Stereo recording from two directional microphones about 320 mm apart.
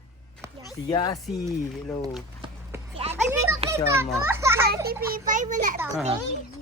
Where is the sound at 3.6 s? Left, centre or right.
Centre.